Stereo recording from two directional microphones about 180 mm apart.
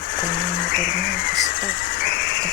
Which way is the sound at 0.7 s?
50° left (ahead or behind).